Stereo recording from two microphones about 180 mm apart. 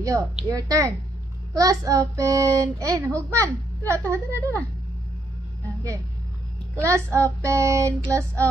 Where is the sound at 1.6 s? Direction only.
20° right (ahead or behind).